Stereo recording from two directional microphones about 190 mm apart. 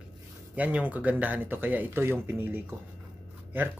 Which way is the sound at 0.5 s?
10° right (ahead or behind).